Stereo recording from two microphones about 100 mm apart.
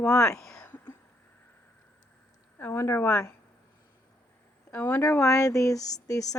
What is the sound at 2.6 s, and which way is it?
Speech, 25° left (ahead or behind).